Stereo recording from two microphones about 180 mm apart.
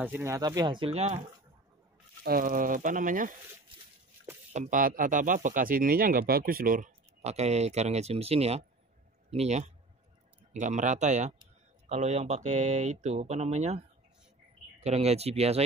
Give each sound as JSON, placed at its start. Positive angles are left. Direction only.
{"t": 0.0, "sound": "speech", "side_deg": -10}
{"t": 2.2, "sound": "speech", "side_deg": -50}
{"t": 4.5, "sound": "speech", "side_deg": -45}